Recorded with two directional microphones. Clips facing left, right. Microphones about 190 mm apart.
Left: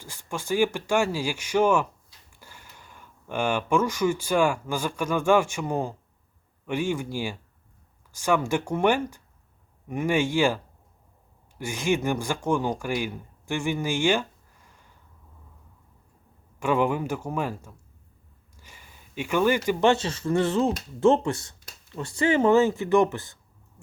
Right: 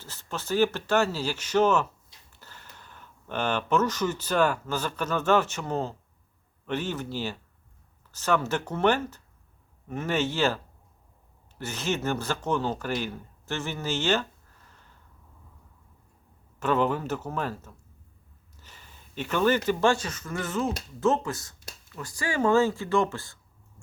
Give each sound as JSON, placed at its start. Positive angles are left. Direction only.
{"t": 0.0, "sound": "speech", "side_deg": 15}
{"t": 16.6, "sound": "speech", "side_deg": 10}
{"t": 18.5, "sound": "a sound", "side_deg": 10}
{"t": 19.9, "sound": "speech", "side_deg": 30}